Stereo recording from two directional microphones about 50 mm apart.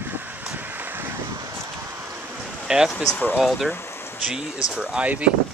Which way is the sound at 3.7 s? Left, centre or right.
Left.